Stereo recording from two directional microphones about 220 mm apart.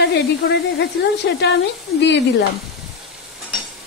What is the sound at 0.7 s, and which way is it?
Speech, 50° left (ahead or behind).